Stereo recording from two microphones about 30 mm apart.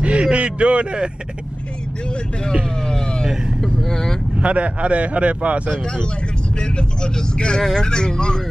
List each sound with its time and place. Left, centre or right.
0.0 s a sound: right
3.8 s speech: centre
4.4 s speech: right
6.6 s speech: left